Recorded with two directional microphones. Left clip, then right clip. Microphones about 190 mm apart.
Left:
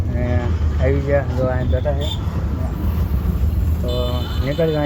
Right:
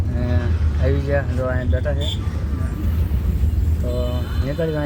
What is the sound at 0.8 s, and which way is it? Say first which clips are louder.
Speech: left 3 dB; centre (ahead or behind).